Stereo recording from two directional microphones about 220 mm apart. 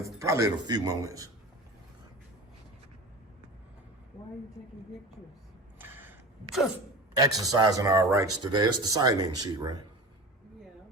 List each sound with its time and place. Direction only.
0.0 s speech: 15° right (ahead or behind)
5.8 s a sound: 10° right (ahead or behind)
7.2 s speech: 15° right (ahead or behind)